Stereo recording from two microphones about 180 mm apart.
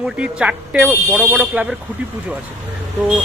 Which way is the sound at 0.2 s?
5° right (ahead or behind).